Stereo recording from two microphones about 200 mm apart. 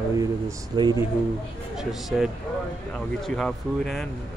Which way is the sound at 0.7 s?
20° right (ahead or behind).